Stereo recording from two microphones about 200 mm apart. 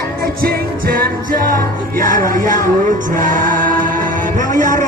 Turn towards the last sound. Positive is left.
turn(degrees=-40)  # may be behind; listen again after turning